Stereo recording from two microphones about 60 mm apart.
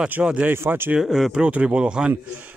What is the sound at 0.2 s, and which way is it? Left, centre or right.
Speech, right.